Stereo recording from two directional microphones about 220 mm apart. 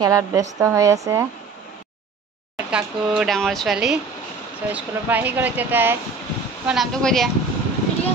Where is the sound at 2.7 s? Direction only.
5° right (ahead or behind).